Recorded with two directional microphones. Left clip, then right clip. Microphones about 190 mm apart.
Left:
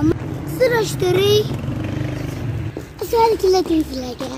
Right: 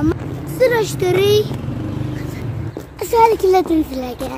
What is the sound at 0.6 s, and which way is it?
Speech, 35° right (ahead or behind).